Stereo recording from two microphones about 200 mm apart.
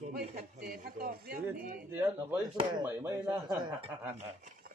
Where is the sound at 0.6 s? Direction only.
50° right (ahead or behind).